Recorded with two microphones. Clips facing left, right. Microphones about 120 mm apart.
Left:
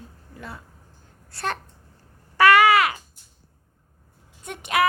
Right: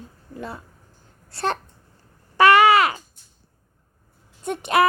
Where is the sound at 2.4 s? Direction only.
25° right (ahead or behind).